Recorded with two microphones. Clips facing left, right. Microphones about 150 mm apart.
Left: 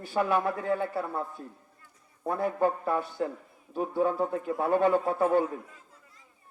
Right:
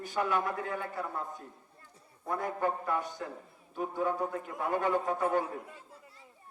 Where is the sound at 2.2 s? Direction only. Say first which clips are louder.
Left 5 dB; 25° left (ahead or behind).